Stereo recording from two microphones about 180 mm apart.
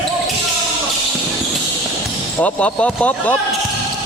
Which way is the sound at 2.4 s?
5° left (ahead or behind).